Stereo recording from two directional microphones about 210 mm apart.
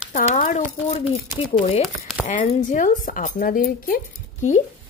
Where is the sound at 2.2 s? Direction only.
40° left (ahead or behind).